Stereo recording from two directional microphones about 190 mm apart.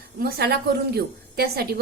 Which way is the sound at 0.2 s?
55° right (ahead or behind).